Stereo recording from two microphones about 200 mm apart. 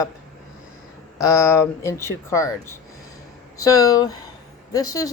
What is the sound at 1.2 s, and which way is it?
Speech, 15° left (ahead or behind).